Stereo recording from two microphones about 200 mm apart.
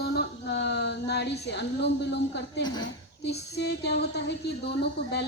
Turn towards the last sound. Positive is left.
turn(degrees=55)  # may be behind; listen again after turning